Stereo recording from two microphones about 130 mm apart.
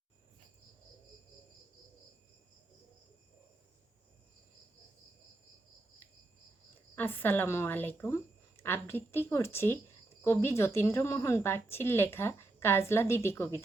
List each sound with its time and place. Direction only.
6.9 s a woman's voice: 15° left (ahead or behind)